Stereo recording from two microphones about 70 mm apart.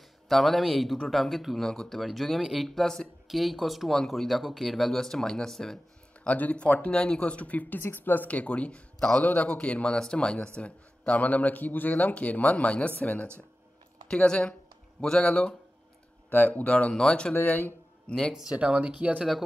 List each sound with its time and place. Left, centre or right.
0.3 s speech: centre
6.2 s speech: left
16.7 s speech: centre
17.3 s speech: left
18.0 s speech: centre
18.3 s speech: centre